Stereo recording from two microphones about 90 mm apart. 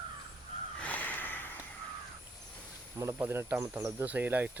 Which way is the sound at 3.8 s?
35° right (ahead or behind).